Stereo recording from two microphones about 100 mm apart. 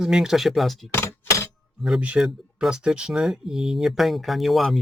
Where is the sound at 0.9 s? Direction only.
25° left (ahead or behind).